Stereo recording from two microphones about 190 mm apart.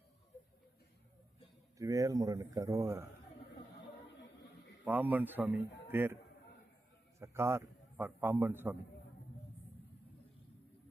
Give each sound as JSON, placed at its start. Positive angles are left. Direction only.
{"t": 1.8, "sound": "a man's voice", "side_deg": -15}
{"t": 4.9, "sound": "a man's voice", "side_deg": -10}
{"t": 7.2, "sound": "a man's voice", "side_deg": -15}